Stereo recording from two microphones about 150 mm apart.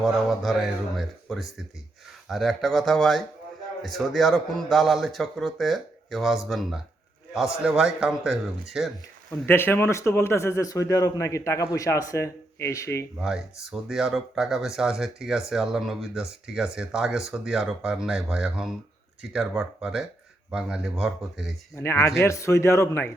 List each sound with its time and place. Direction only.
0.0 s speech: centre (ahead or behind)
9.5 s a man's voice: 15° left (ahead or behind)
13.1 s speech: 5° right (ahead or behind)
21.8 s a man's voice: 20° left (ahead or behind)